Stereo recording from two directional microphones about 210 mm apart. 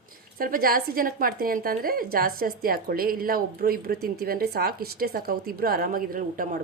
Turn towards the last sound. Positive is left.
turn(degrees=-40)  # may be behind; listen again after turning